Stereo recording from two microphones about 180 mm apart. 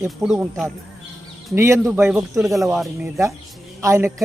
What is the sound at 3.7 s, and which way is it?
Speech, 15° right (ahead or behind).